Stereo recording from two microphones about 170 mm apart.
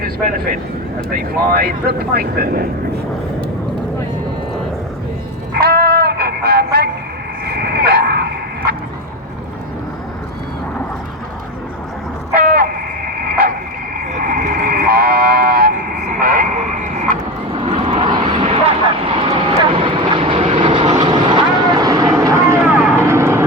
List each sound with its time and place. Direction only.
1.1 s speech: 65° right (ahead or behind)
5.5 s music: 65° right (ahead or behind)
7.4 s a sound: 70° right (ahead or behind)
12.3 s a sound: 60° right (ahead or behind)
14.1 s vehicle: 55° right (ahead or behind)
16.2 s radio: 55° right (ahead or behind)
17.5 s vehicle: 30° right (ahead or behind); by 23.4 s 15° right (ahead or behind)